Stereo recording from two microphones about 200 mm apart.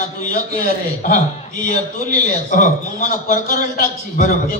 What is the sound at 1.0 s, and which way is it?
A man's voice, 40° left (ahead or behind).